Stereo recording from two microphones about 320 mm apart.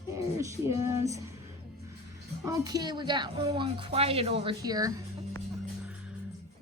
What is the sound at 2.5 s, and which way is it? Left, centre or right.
Speech, centre.